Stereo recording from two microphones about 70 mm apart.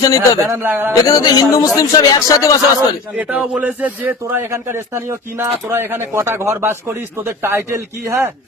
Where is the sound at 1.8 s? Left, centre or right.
Left.